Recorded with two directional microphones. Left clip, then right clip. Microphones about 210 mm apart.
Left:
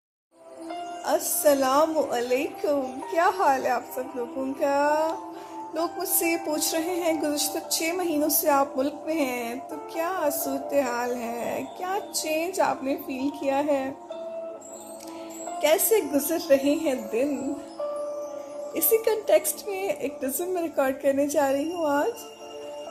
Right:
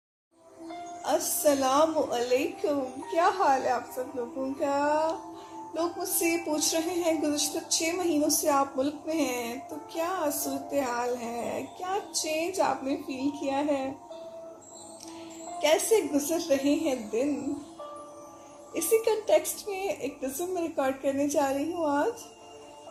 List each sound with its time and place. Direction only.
1.0 s speech: 35° left (ahead or behind)
15.5 s speech: 35° left (ahead or behind)
18.7 s speech: 35° left (ahead or behind)